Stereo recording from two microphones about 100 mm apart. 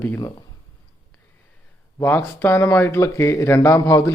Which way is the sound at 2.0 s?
20° left (ahead or behind).